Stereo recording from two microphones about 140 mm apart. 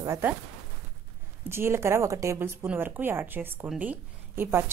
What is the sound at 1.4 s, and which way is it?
A woman's voice, 15° right (ahead or behind).